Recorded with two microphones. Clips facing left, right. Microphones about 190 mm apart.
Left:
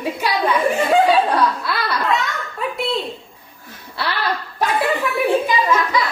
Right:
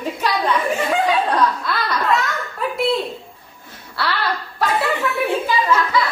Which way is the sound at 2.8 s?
Centre (ahead or behind).